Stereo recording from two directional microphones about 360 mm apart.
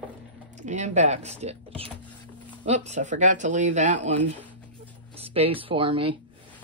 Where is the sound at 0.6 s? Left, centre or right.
Centre.